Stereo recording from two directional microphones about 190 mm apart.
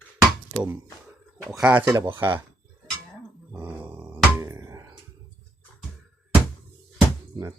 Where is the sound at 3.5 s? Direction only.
15° right (ahead or behind).